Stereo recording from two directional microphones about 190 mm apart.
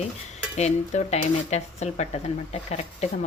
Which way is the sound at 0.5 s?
35° left (ahead or behind).